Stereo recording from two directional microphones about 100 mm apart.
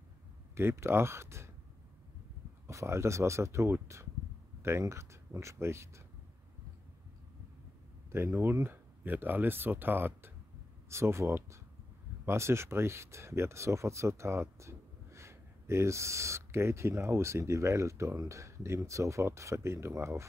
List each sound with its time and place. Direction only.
0.6 s speech: 25° right (ahead or behind)
2.6 s speech: 30° right (ahead or behind)
8.1 s speech: 25° right (ahead or behind)